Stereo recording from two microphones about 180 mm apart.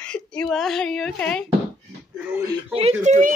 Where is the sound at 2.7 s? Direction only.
35° right (ahead or behind).